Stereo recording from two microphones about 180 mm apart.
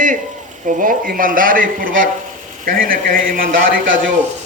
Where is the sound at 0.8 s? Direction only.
50° right (ahead or behind).